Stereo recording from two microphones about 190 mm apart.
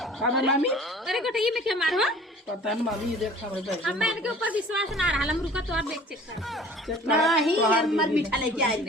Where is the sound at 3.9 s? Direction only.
5° right (ahead or behind).